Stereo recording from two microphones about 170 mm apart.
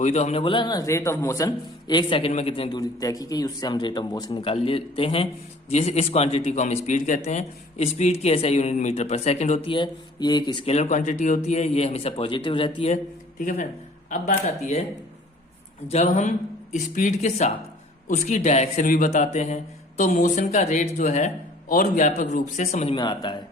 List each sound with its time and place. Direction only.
0.0 s a man's voice: 40° left (ahead or behind)
9.7 s speech: 25° left (ahead or behind)
10.7 s a man's voice: 40° left (ahead or behind)
13.4 s speech: 50° left (ahead or behind)
14.4 s a man's voice: 40° left (ahead or behind)
15.9 s a man's voice: 40° left (ahead or behind)
23.0 s speech: 25° left (ahead or behind)